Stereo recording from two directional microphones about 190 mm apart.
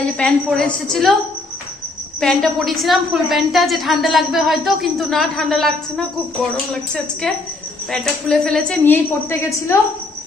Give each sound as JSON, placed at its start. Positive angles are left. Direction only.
{"t": 0.2, "sound": "a woman's voice", "side_deg": 0}
{"t": 2.1, "sound": "a woman's voice", "side_deg": 0}